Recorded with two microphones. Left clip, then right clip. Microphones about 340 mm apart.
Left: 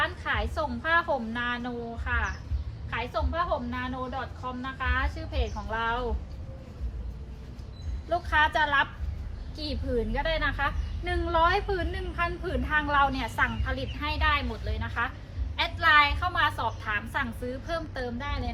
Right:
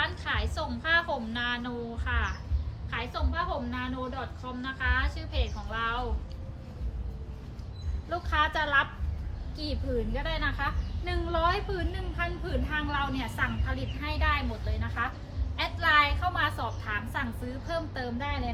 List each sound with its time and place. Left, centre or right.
0.0 s a woman's voice: centre
8.1 s a woman's voice: left
10.2 s a woman's voice: left; by 18.5 s centre